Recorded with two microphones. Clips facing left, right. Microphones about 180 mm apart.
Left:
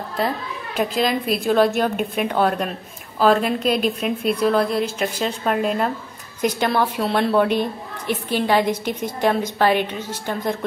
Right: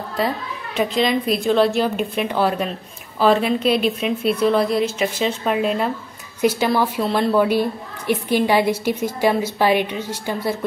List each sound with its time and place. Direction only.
0.7 s a woman's voice: centre (ahead or behind)